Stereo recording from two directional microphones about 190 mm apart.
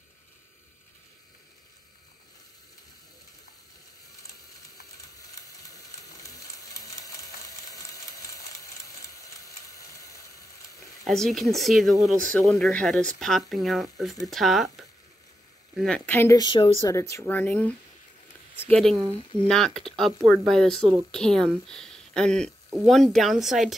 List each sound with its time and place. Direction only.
6.2 s a sound: 20° left (ahead or behind)
11.1 s speech: centre (ahead or behind); by 16.7 s 25° left (ahead or behind)
16.8 s speech: 15° left (ahead or behind)
18.9 s speech: 20° right (ahead or behind)
19.4 s speech: centre (ahead or behind)